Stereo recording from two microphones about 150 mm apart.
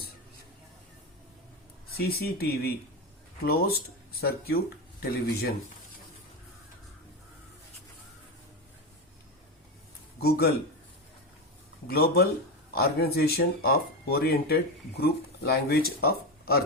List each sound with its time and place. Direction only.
2.0 s speech: 90° left
10.2 s a man's voice: 90° left
11.9 s speech: 90° left